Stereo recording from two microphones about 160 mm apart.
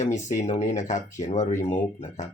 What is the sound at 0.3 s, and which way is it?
Speech, 50° left (ahead or behind).